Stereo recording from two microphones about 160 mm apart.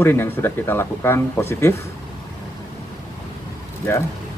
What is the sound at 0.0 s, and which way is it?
Speech, 15° left (ahead or behind).